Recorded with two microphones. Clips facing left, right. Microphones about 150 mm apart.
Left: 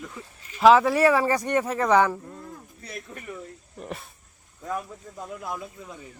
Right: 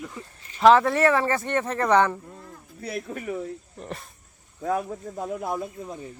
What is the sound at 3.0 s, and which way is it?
Speech, 55° right (ahead or behind).